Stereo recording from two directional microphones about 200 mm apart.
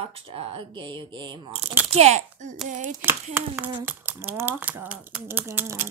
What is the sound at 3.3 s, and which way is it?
Speech, 10° right (ahead or behind).